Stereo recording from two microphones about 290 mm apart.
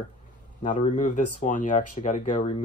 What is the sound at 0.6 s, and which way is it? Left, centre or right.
Speech, left.